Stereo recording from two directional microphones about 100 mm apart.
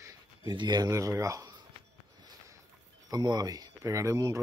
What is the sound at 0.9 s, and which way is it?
Speech, 30° right (ahead or behind).